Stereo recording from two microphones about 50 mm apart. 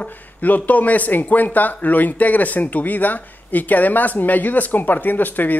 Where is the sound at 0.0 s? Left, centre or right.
Left.